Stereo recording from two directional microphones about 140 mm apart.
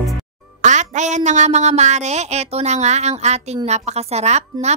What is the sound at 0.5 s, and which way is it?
Speech, 60° right (ahead or behind).